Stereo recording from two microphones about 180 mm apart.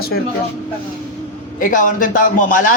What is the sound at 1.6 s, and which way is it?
A man's voice, 45° left (ahead or behind).